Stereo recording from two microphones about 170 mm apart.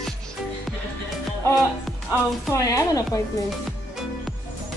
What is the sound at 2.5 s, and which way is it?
Speech, 20° left (ahead or behind).